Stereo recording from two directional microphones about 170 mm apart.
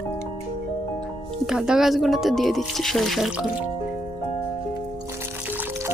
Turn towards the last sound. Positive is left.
turn(degrees=-10)  # may be behind; listen again after turning